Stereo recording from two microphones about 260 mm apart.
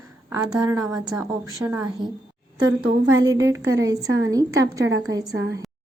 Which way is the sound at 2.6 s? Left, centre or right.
Right.